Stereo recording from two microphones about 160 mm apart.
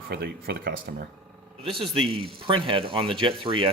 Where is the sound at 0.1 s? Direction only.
90° right.